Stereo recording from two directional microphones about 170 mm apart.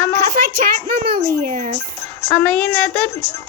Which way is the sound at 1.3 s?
50° right (ahead or behind).